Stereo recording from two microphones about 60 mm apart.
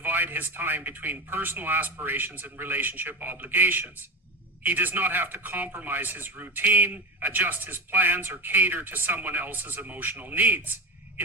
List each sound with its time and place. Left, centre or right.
0.0 s a man's voice: right